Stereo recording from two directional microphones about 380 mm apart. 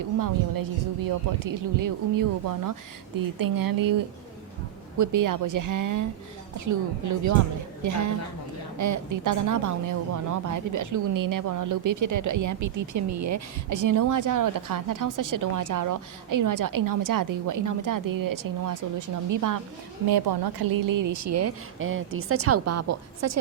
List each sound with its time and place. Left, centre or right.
0.2 s speech: right
4.9 s a woman's voice: right
20.1 s a woman's voice: right